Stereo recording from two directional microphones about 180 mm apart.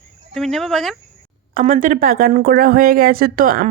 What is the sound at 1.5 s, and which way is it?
Speech, 45° right (ahead or behind).